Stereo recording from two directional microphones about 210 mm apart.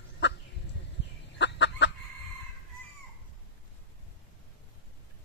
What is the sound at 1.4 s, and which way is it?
Gobble, 55° left (ahead or behind).